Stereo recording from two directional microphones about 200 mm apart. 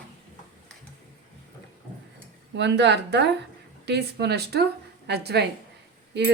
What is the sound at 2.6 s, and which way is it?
Speech, 60° right (ahead or behind).